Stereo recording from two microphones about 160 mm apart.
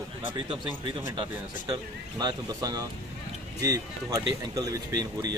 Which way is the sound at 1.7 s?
25° right (ahead or behind).